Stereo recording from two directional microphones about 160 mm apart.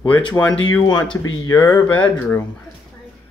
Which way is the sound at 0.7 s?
25° left (ahead or behind).